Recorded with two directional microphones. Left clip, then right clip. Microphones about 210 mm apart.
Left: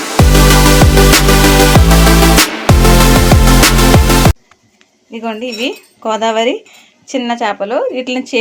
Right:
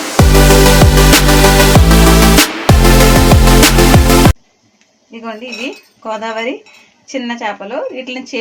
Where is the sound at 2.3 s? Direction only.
Centre (ahead or behind).